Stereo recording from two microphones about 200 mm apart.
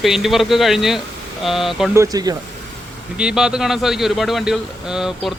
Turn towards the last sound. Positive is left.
turn(degrees=-5)  # may be behind; listen again after turning